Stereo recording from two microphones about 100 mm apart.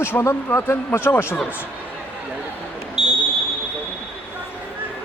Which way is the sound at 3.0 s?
5° right (ahead or behind).